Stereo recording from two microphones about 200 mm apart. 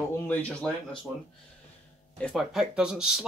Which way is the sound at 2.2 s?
Centre (ahead or behind).